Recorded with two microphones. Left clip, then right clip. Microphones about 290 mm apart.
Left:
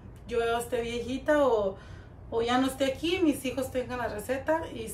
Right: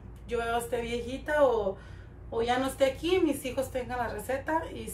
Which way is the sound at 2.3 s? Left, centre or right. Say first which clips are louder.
Left 1 dB; centre.